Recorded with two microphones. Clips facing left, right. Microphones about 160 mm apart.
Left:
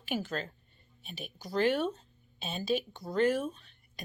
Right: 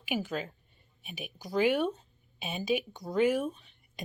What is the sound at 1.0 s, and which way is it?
Speech, 15° right (ahead or behind).